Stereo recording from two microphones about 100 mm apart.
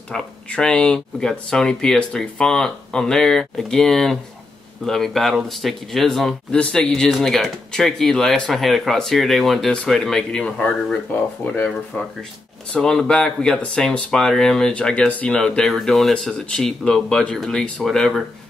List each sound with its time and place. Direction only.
0.1 s speech: 10° left (ahead or behind)
12.7 s speech: 5° left (ahead or behind)